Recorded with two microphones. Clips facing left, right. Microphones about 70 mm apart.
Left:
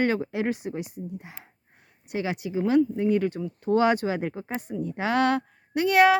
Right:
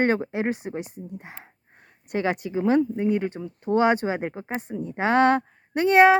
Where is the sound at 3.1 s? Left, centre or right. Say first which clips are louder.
Left 1 dB; right.